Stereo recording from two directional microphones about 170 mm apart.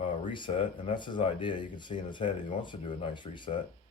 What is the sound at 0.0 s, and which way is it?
Speech, 30° left (ahead or behind).